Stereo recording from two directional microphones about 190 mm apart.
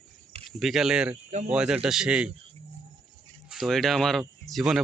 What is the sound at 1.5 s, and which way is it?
Speech, 5° right (ahead or behind).